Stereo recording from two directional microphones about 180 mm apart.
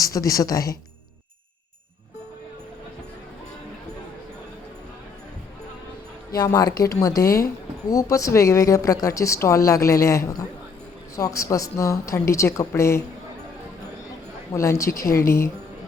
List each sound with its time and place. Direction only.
0.0 s speech: 20° left (ahead or behind)
6.3 s speech: 20° left (ahead or behind)
14.5 s speech: 15° left (ahead or behind)